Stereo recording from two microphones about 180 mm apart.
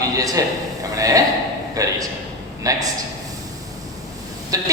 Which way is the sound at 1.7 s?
20° right (ahead or behind).